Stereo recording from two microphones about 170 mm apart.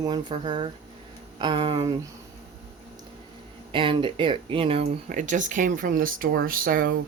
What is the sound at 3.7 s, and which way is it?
Speech, 30° right (ahead or behind).